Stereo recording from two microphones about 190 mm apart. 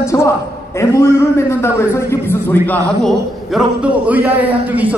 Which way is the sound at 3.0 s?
5° right (ahead or behind).